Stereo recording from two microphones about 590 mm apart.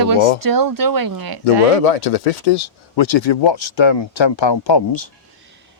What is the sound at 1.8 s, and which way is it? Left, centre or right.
Speech, left.